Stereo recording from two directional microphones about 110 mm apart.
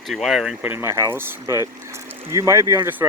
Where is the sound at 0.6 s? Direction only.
20° right (ahead or behind).